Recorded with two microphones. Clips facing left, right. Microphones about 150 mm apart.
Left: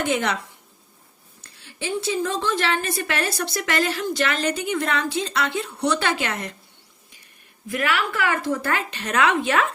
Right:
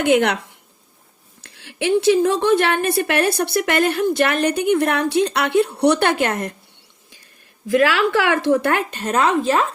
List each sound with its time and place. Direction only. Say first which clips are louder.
0.0 s a woman's voice: right 7 dB; 55° right (ahead or behind)
1.5 s a woman's voice: right 10 dB; 75° right (ahead or behind); by 6.6 s 50° right (ahead or behind)
7.7 s a woman's voice: right 8 dB; 90° right; by 8.8 s 70° right (ahead or behind)
8.9 s a woman's voice: right 3 dB; 45° right (ahead or behind)